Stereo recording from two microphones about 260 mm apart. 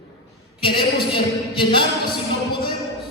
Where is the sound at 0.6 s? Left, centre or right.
Centre.